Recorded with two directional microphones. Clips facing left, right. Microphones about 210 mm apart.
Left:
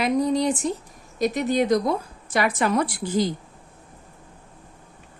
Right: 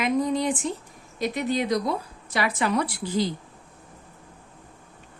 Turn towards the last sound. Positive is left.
turn(degrees=45)  # may be behind; listen again after turning